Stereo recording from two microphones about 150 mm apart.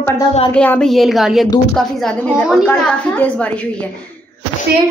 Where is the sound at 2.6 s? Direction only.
10° left (ahead or behind).